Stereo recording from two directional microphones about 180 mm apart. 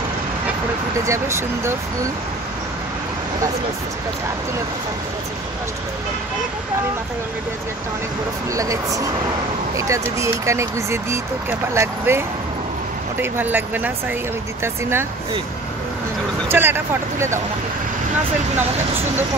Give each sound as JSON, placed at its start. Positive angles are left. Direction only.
{"t": 1.0, "sound": "speech", "side_deg": -15}
{"t": 8.5, "sound": "speech", "side_deg": -20}
{"t": 13.2, "sound": "speech", "side_deg": -10}
{"t": 16.4, "sound": "speech", "side_deg": -10}
{"t": 18.6, "sound": "speech", "side_deg": -10}